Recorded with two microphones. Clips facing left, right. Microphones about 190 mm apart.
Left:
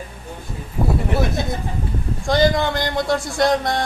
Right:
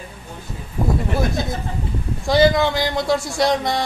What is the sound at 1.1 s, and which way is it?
Speech, centre (ahead or behind).